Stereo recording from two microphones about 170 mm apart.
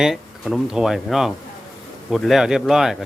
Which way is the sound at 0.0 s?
5° right (ahead or behind).